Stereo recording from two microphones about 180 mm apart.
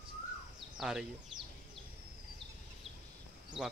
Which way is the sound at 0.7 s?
Centre (ahead or behind).